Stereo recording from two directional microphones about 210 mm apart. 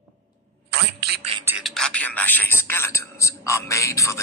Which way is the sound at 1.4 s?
10° right (ahead or behind).